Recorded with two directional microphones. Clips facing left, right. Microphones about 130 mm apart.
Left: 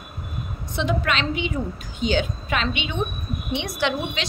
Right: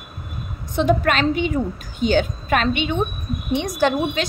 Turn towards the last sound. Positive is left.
turn(degrees=-45)  # may be behind; listen again after turning